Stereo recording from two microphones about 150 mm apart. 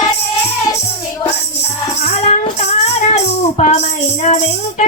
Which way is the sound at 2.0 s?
45° left (ahead or behind).